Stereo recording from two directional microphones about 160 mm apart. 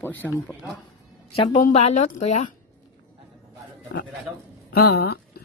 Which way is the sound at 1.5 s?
50° left (ahead or behind).